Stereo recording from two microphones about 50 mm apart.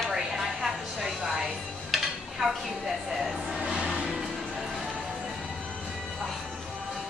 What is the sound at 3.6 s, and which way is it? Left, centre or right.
Music, centre.